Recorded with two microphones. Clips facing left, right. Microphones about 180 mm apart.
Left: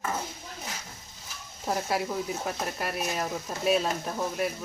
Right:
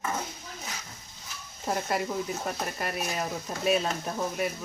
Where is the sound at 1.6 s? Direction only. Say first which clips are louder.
Even; centre (ahead or behind).